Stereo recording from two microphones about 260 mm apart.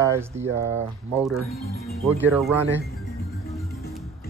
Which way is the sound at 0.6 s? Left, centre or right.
Right.